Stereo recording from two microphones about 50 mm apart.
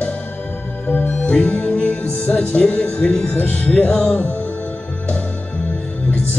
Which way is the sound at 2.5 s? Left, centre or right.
Left.